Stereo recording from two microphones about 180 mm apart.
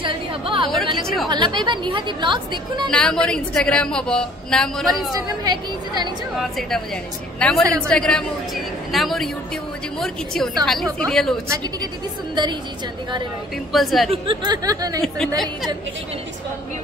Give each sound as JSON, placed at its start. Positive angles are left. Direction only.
{"t": 0.0, "sound": "a sound", "side_deg": -25}
{"t": 1.0, "sound": "a woman's voice", "side_deg": 0}
{"t": 1.3, "sound": "a woman's voice", "side_deg": -25}
{"t": 2.9, "sound": "a woman's voice", "side_deg": 5}
{"t": 5.1, "sound": "a woman's voice", "side_deg": -20}
{"t": 7.3, "sound": "a woman's voice", "side_deg": 5}
{"t": 7.6, "sound": "speech", "side_deg": -20}
{"t": 7.9, "sound": "a woman's voice", "side_deg": 5}
{"t": 11.4, "sound": "speech", "side_deg": -15}
{"t": 13.7, "sound": "a woman's voice", "side_deg": 0}
{"t": 14.1, "sound": "a woman's voice", "side_deg": -30}
{"t": 15.0, "sound": "a woman's voice", "side_deg": 0}